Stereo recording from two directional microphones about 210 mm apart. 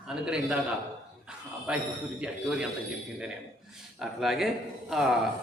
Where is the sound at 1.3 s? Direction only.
5° right (ahead or behind).